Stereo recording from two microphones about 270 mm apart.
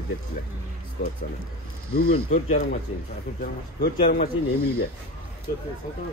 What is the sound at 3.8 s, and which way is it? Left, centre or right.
Speech, left.